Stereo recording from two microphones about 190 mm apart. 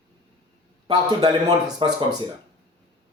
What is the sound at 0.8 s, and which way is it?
A man's voice, 20° right (ahead or behind).